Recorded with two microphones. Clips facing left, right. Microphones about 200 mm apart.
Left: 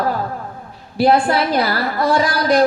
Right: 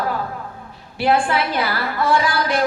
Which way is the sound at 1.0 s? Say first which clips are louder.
Left 4 dB; 40° left (ahead or behind).